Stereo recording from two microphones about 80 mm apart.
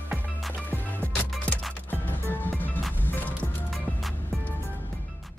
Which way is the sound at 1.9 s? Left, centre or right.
Left.